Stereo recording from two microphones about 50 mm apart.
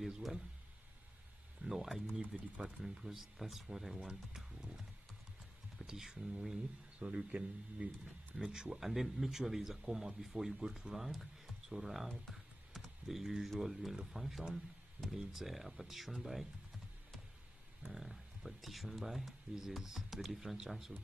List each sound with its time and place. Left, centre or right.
0.0 s speech: centre
1.6 s speech: centre
5.8 s speech: centre
7.0 s speech: right; by 12.1 s centre
12.3 s typing: centre
13.6 s speech: centre
17.9 s speech: centre